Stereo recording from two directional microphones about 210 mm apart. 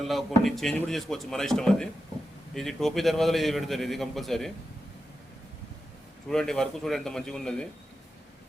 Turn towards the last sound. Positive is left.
turn(degrees=5)  # may be behind; listen again after turning